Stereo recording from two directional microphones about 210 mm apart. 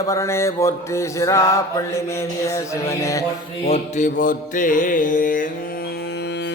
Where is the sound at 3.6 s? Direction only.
30° left (ahead or behind).